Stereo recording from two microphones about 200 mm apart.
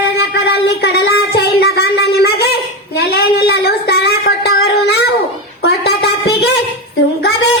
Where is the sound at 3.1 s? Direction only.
50° left (ahead or behind).